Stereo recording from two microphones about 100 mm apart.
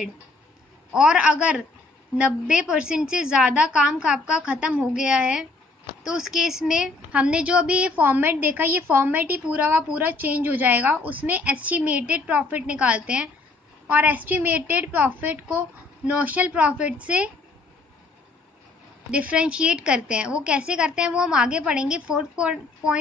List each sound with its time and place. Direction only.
0.9 s a woman's voice: 10° right (ahead or behind)
19.0 s a woman's voice: 10° right (ahead or behind)